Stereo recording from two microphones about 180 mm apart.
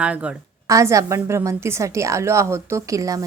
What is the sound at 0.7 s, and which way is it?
Speech, 15° right (ahead or behind).